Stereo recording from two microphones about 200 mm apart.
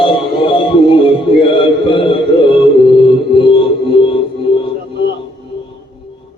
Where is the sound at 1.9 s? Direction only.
25° left (ahead or behind).